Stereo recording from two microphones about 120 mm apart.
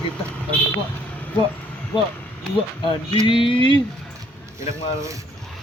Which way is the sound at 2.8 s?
45° left (ahead or behind).